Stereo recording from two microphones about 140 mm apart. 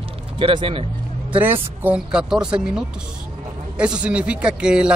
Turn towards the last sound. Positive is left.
turn(degrees=-5)  # may be behind; listen again after turning